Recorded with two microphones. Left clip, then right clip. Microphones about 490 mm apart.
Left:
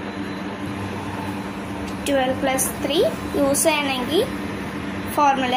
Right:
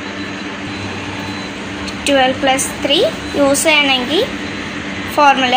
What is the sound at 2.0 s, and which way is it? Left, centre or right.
A woman's voice, left.